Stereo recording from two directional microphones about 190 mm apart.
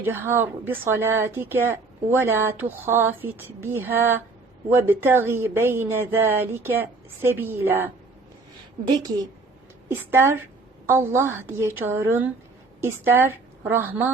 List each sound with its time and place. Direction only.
0.0 s speech: 10° right (ahead or behind)
8.9 s a woman's voice: 20° right (ahead or behind)